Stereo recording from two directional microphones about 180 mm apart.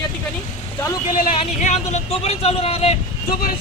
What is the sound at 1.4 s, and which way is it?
Speech, 40° left (ahead or behind).